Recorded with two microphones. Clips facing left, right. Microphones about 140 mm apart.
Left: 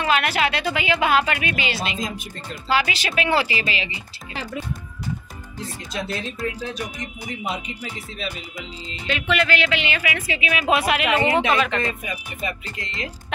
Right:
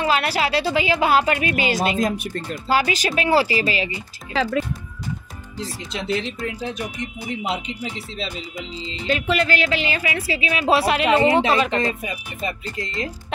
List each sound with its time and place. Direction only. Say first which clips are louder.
0.0 s a woman's voice: even; 35° right (ahead or behind)
2.0 s speech: right 8 dB; 60° right (ahead or behind)
2.7 s a woman's voice: right 2 dB; 40° right (ahead or behind)
4.3 s speech: right 9 dB; 90° right
5.8 s speech: right 4 dB; 20° right (ahead or behind)
9.3 s a woman's voice: left 1 dB; 35° right (ahead or behind)